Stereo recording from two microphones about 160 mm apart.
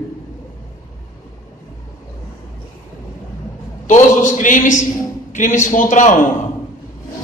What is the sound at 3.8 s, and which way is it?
A man's voice, 50° left (ahead or behind).